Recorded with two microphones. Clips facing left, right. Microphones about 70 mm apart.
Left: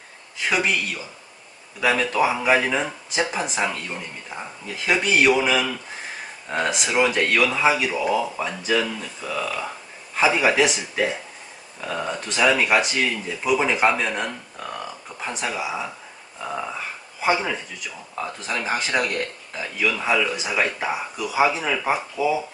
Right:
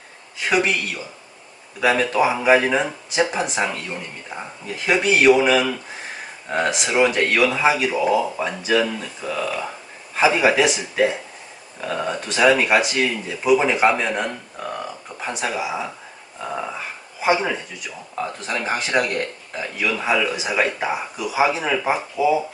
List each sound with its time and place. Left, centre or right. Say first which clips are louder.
0.4 s speech: right 2 dB; centre
16.4 s a sound: right 1 dB; centre
18.1 s speech: right 2 dB; centre